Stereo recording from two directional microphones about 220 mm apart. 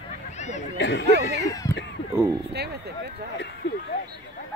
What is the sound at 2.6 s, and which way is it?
Speech, 50° right (ahead or behind).